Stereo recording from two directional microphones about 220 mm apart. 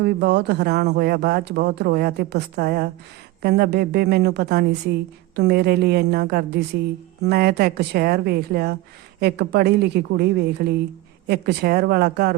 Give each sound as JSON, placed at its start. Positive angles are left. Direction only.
{"t": 0.0, "sound": "speech", "side_deg": -50}